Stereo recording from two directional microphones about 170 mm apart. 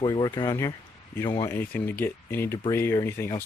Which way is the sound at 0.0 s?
20° left (ahead or behind).